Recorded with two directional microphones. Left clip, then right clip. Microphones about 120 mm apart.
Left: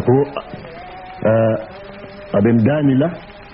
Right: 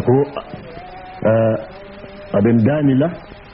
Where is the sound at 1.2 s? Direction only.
25° left (ahead or behind).